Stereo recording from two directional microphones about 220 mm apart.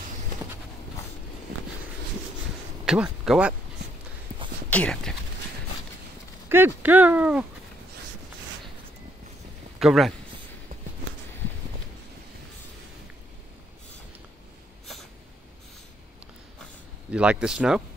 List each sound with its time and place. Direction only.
2.8 s speech: 5° right (ahead or behind)
4.6 s speech: 5° left (ahead or behind)
6.5 s speech: 10° right (ahead or behind)
9.8 s speech: centre (ahead or behind)
17.1 s speech: 5° right (ahead or behind)